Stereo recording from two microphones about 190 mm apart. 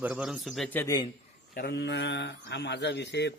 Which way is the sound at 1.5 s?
55° left (ahead or behind).